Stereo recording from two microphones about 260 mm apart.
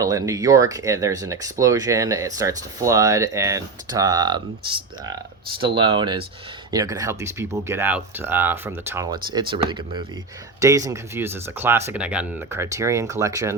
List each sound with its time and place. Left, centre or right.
0.0 s speech: centre